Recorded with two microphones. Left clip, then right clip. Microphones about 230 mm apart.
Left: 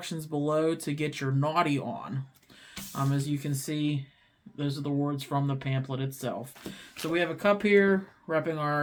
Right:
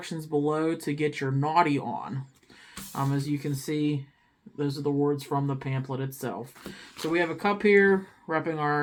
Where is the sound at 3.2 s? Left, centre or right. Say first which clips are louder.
Right 3 dB; left.